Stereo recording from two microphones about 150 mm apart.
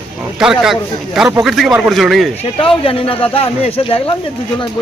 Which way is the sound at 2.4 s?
35° left (ahead or behind).